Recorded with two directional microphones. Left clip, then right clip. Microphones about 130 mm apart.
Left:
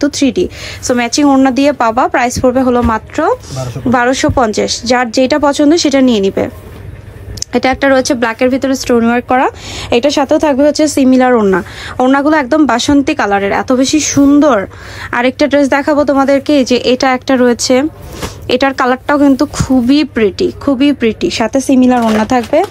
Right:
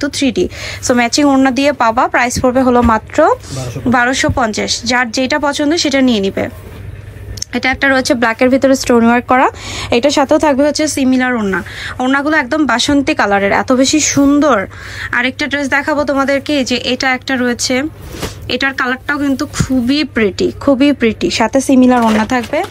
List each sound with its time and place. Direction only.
0.0 s a woman's voice: 35° left (ahead or behind)
0.3 s speech: 15° left (ahead or behind)
3.5 s a woman's voice: 25° left (ahead or behind)
7.3 s speech: 40° left (ahead or behind)
8.0 s speech: 20° left (ahead or behind)
15.0 s a woman's voice: 40° left (ahead or behind)
20.2 s speech: 20° left (ahead or behind)
22.2 s a woman's voice: 35° left (ahead or behind)